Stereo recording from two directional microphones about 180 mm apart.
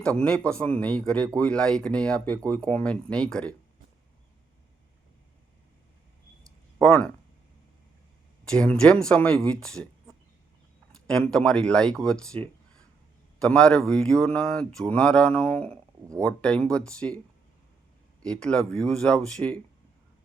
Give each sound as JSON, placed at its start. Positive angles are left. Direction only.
{"t": 0.0, "sound": "speech", "side_deg": 5}
{"t": 8.4, "sound": "speech", "side_deg": 5}
{"t": 11.0, "sound": "speech", "side_deg": 5}
{"t": 13.4, "sound": "speech", "side_deg": 5}
{"t": 18.2, "sound": "speech", "side_deg": 5}